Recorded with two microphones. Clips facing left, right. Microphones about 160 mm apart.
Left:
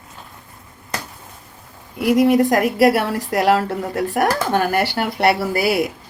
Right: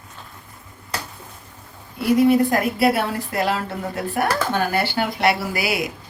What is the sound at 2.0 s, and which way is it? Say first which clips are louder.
Speech: left 1 dB; 75° left (ahead or behind).